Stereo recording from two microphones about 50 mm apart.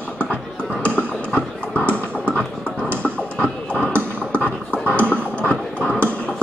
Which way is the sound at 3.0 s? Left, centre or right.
Left.